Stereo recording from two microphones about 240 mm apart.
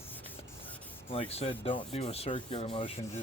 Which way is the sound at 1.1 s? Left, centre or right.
Left.